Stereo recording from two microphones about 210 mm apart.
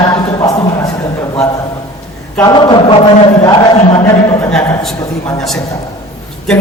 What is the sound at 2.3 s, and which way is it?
A man's voice, 20° left (ahead or behind).